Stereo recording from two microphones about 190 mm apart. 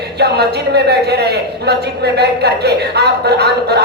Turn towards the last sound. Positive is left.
turn(degrees=-60)  # may be behind; listen again after turning